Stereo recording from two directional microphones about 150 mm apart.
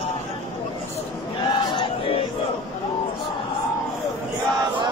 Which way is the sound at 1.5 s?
30° left (ahead or behind).